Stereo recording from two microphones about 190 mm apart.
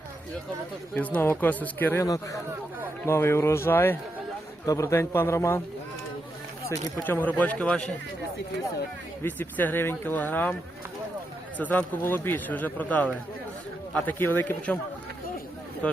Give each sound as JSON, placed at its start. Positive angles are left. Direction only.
{"t": 0.9, "sound": "speech", "side_deg": 10}
{"t": 7.0, "sound": "speech", "side_deg": 10}
{"t": 9.2, "sound": "speech", "side_deg": 10}
{"t": 11.5, "sound": "speech", "side_deg": 10}
{"t": 15.8, "sound": "speech", "side_deg": 5}